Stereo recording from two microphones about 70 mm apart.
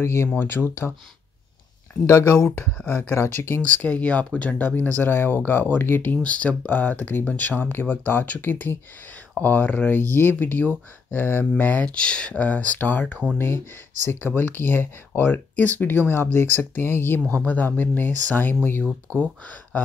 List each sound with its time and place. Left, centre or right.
0.0 s speech: left
2.0 s speech: left
2.3 s speech: centre
3.2 s speech: left
3.6 s speech: centre
11.8 s speech: centre